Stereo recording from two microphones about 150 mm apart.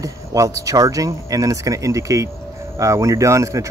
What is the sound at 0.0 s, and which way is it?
Speech, 20° right (ahead or behind).